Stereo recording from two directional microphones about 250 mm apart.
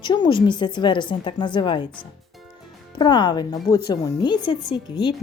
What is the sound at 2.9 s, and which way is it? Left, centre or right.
Speech, centre.